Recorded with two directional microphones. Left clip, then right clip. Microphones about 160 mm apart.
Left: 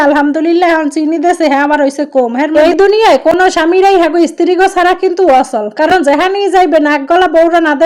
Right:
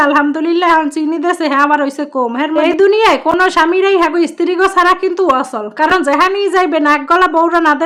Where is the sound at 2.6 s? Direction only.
25° left (ahead or behind).